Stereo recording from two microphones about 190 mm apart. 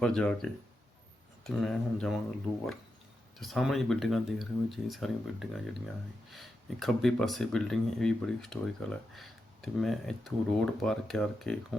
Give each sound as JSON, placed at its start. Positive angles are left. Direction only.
{"t": 0.0, "sound": "speech", "side_deg": 5}
{"t": 3.3, "sound": "speech", "side_deg": 0}